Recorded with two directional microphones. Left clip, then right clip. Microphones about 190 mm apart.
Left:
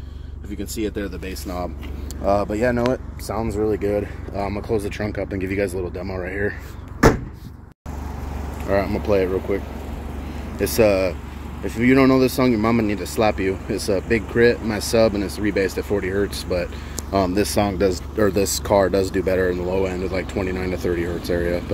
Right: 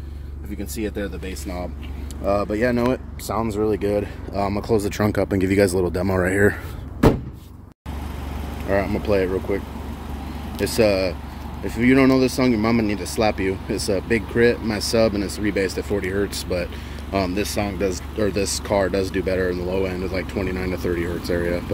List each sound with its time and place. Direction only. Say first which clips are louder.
0.6 s speech: left 1 dB; 10° left (ahead or behind); by 4.5 s 5° right (ahead or behind)
4.5 s speech: right 2 dB; 20° right (ahead or behind)
8.6 s speech: left 1 dB; centre (ahead or behind)
10.6 s speech: left 2 dB; 10° left (ahead or behind)
17.3 s speech: left 4 dB; 25° left (ahead or behind); by 21.6 s centre (ahead or behind)